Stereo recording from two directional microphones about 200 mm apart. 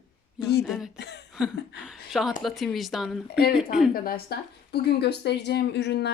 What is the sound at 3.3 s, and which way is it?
A woman's voice, 50° left (ahead or behind).